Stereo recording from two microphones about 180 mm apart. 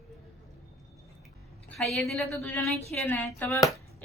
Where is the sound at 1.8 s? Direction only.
Centre (ahead or behind).